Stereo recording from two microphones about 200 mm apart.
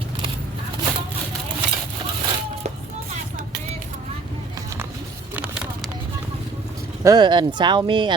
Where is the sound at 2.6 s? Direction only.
35° right (ahead or behind).